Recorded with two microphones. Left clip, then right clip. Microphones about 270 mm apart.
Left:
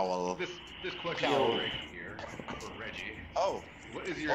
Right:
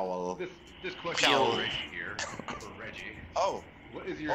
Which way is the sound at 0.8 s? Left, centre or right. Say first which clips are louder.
Right 1 dB; centre.